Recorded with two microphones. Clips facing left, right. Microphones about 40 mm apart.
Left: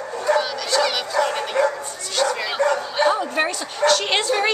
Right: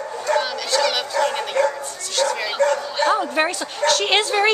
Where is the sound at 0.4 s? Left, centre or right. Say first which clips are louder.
Even; centre.